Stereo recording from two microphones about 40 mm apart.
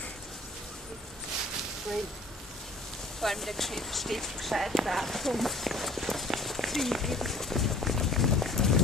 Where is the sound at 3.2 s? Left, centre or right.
Centre.